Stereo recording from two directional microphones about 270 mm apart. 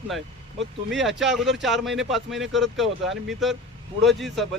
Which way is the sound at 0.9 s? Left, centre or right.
Centre.